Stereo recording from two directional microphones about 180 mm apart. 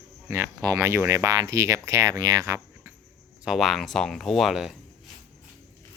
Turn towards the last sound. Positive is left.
turn(degrees=0)  # may be behind; listen again after turning